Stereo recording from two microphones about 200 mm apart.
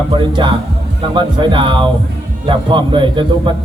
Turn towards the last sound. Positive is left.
turn(degrees=-25)  # may be behind; listen again after turning